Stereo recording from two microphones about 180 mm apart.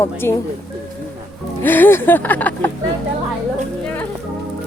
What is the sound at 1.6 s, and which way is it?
A woman's voice, 10° left (ahead or behind).